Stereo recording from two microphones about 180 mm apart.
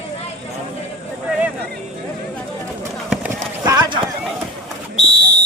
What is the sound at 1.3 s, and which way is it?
Vehicle, 10° right (ahead or behind).